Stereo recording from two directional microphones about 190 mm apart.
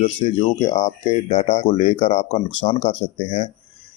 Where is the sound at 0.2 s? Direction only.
30° left (ahead or behind).